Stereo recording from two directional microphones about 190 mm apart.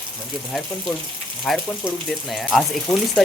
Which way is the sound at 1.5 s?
Centre (ahead or behind).